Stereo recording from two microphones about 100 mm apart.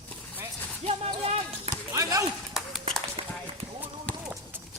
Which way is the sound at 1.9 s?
35° right (ahead or behind).